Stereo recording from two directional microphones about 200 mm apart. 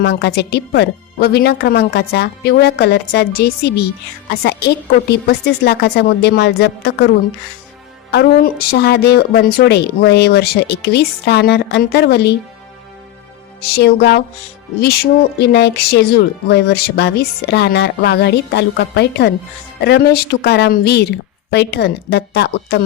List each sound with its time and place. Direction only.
0.0 s speech: 55° left (ahead or behind)
5.1 s speech: 55° left (ahead or behind)
8.1 s speech: 50° left (ahead or behind)
13.7 s speech: 55° left (ahead or behind)